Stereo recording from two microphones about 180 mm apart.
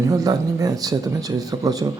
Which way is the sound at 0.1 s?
20° right (ahead or behind).